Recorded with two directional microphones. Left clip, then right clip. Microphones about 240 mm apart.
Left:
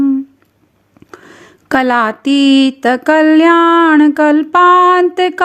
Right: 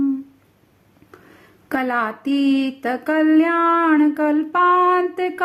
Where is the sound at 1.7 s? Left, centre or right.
Left.